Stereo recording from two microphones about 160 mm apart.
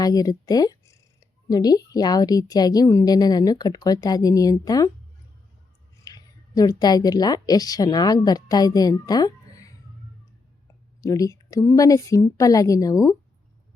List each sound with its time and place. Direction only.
0.0 s a woman's voice: 25° left (ahead or behind)
6.1 s a woman's voice: 25° left (ahead or behind)
11.0 s a woman's voice: 20° left (ahead or behind)